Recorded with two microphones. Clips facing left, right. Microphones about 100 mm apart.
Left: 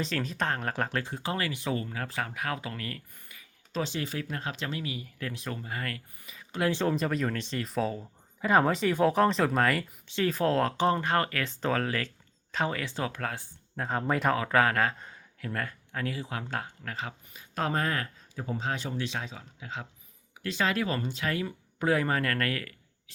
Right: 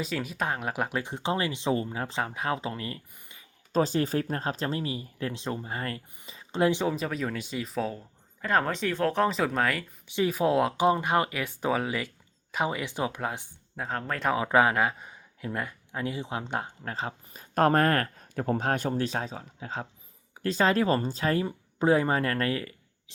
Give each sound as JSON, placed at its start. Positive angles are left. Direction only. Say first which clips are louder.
{"t": 0.0, "sound": "speech", "louder": "even", "side_deg": -10}
{"t": 3.7, "sound": "speech", "louder": "right 7 dB", "side_deg": -40}
{"t": 6.8, "sound": "speech", "louder": "left 1 dB", "side_deg": 0}
{"t": 10.1, "sound": "speech", "louder": "right 2 dB", "side_deg": -15}
{"t": 13.7, "sound": "speech", "louder": "left 1 dB", "side_deg": 0}
{"t": 14.3, "sound": "speech", "louder": "right 2 dB", "side_deg": -20}
{"t": 17.5, "sound": "speech", "louder": "right 7 dB", "side_deg": -50}